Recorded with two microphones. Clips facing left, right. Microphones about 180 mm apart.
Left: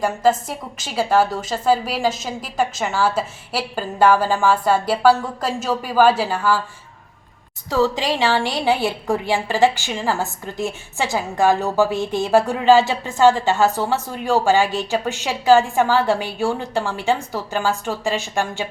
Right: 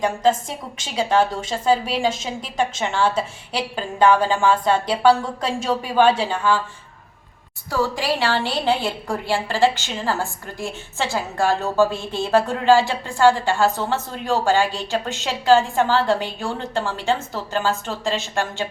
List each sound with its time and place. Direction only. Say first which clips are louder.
0.0 s a woman's voice: left 1 dB; 5° left (ahead or behind)
7.7 s a woman's voice: left 3 dB; 20° left (ahead or behind)